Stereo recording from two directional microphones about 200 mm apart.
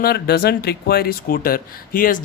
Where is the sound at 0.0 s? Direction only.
50° left (ahead or behind).